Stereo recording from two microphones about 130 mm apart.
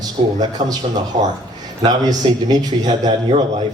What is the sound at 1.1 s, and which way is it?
Speech, 70° right (ahead or behind).